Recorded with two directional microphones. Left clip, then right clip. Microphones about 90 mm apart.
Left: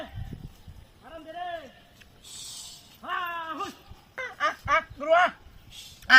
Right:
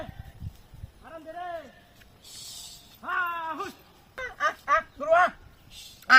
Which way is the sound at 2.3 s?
Centre (ahead or behind).